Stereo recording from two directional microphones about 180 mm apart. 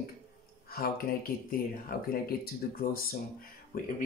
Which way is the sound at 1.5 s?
55° left (ahead or behind).